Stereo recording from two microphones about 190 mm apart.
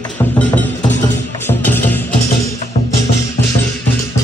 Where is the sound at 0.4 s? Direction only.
10° left (ahead or behind).